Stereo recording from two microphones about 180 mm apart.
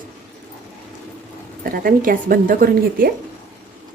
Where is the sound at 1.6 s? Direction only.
50° right (ahead or behind).